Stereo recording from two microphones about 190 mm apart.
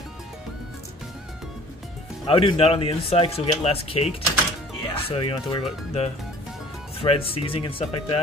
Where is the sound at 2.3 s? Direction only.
30° left (ahead or behind).